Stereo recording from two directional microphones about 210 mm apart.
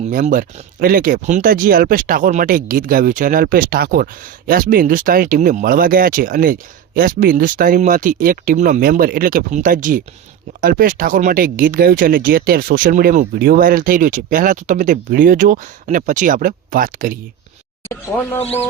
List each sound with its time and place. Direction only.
0.1 s speech: 40° right (ahead or behind)
17.8 s speech: 10° left (ahead or behind)